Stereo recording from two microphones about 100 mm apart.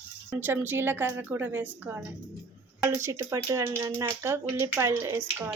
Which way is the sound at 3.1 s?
30° right (ahead or behind).